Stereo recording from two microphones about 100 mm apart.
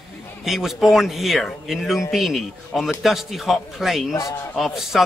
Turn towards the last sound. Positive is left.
turn(degrees=-5)  # may be behind; listen again after turning